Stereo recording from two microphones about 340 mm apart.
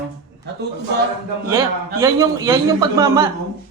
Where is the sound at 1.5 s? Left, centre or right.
Centre.